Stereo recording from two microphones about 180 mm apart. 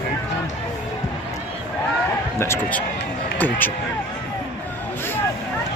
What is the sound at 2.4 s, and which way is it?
Speech, 10° left (ahead or behind).